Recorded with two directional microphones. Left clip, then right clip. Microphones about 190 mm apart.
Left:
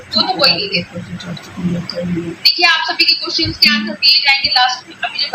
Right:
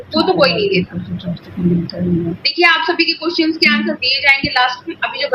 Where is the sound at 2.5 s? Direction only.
20° right (ahead or behind).